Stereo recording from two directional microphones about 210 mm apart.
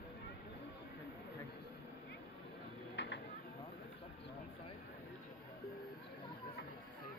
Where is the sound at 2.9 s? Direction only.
55° left (ahead or behind).